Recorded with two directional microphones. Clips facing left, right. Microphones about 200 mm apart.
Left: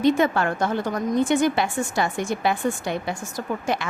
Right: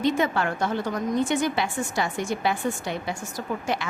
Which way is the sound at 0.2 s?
50° left (ahead or behind).